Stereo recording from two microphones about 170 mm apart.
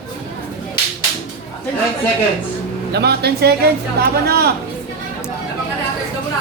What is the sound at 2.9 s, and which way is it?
A woman's voice, 70° right (ahead or behind).